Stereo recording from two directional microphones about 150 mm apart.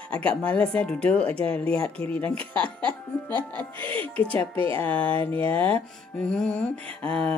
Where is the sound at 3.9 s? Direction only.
10° left (ahead or behind).